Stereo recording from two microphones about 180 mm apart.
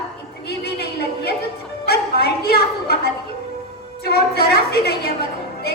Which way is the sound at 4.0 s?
60° left (ahead or behind).